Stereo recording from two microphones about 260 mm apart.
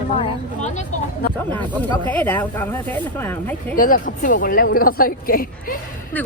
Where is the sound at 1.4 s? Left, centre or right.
Centre.